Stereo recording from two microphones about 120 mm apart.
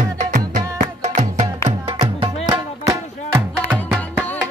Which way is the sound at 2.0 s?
50° right (ahead or behind).